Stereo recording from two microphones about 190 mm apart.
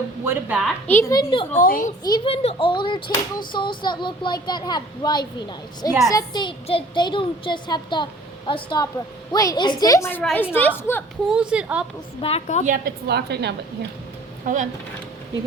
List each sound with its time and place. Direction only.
0.3 s a woman's voice: 10° right (ahead or behind)
0.9 s a child's voice: 15° left (ahead or behind)
1.5 s a woman's voice: 45° left (ahead or behind)
2.0 s a child's voice: 25° left (ahead or behind)
11.3 s a woman's voice: 5° right (ahead or behind)
12.2 s a woman's voice: 35° left (ahead or behind)
12.6 s a woman's voice: 50° right (ahead or behind)
14.4 s speech: 40° right (ahead or behind)